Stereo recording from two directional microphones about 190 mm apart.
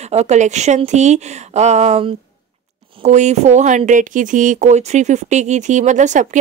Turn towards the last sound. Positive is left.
turn(degrees=-40)  # may be behind; listen again after turning